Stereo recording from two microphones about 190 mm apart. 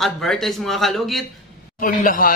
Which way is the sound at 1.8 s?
45° left (ahead or behind).